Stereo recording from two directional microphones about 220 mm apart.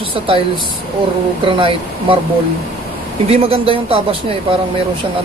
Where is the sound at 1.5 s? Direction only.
25° right (ahead or behind).